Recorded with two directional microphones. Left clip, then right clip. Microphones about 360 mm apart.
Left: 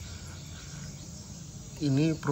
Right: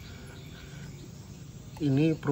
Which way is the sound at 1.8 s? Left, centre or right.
Centre.